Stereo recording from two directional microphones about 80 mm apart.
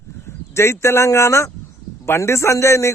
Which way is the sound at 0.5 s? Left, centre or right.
Left.